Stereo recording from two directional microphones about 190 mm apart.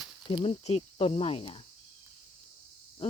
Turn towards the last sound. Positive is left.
turn(degrees=30)  # may be behind; listen again after turning